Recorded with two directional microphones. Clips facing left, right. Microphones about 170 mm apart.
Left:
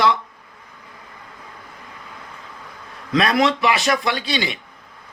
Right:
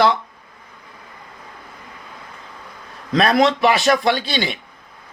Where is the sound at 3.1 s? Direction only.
45° right (ahead or behind).